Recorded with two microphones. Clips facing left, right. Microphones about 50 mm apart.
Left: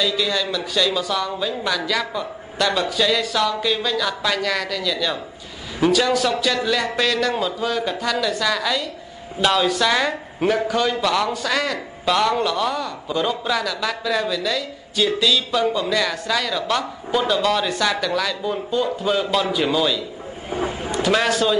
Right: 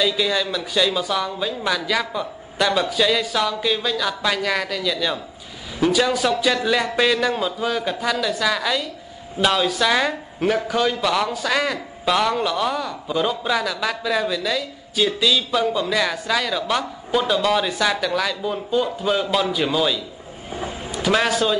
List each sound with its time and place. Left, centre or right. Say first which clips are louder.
0.0 s speech: right 1 dB; centre
20.5 s a sound: left 5 dB; left
20.9 s a man's voice: even; centre